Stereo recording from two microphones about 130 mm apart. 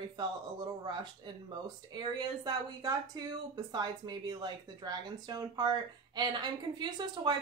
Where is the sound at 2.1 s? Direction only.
30° right (ahead or behind).